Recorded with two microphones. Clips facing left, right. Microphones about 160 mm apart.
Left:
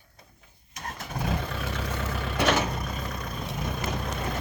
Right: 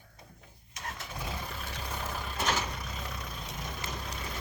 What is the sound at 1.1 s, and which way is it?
Vehicle, 75° left (ahead or behind).